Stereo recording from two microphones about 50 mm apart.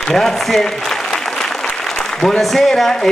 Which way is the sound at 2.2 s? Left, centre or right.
Centre.